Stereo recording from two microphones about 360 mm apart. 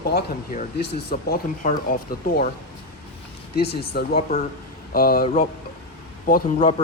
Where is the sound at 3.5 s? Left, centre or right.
Left.